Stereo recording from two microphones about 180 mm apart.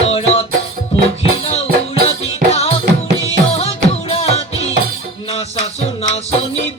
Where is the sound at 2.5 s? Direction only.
35° left (ahead or behind).